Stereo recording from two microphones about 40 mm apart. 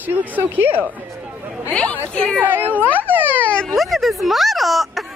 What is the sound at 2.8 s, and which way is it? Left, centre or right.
Speech, left.